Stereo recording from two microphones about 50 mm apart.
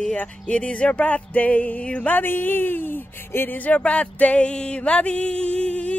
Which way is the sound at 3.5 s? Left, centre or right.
Left.